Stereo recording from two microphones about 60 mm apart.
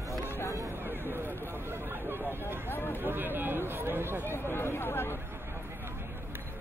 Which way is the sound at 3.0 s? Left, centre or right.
Right.